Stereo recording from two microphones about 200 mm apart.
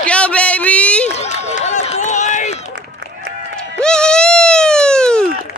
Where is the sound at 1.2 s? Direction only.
35° left (ahead or behind).